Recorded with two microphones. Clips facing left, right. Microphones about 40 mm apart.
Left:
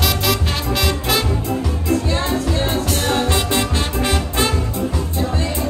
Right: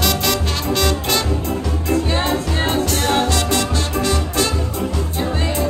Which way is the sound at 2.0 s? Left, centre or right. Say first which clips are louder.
Even; right.